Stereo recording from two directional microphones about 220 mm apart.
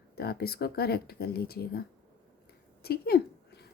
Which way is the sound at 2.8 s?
45° left (ahead or behind).